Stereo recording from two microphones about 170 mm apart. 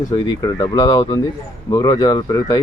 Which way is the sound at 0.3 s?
20° left (ahead or behind).